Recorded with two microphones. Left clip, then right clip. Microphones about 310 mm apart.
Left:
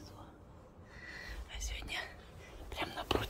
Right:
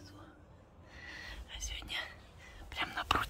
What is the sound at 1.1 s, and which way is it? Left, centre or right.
Whispering, centre.